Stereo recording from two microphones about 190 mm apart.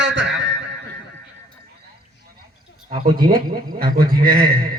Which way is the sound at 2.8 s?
50° right (ahead or behind).